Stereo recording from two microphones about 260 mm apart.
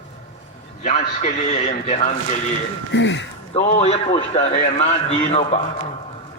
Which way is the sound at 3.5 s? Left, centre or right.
Left.